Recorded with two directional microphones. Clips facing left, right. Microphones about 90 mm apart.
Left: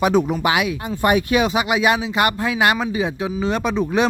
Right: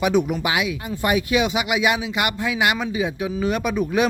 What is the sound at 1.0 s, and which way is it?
Speech, 50° left (ahead or behind).